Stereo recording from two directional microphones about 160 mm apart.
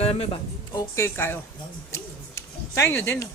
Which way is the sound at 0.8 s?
15° left (ahead or behind).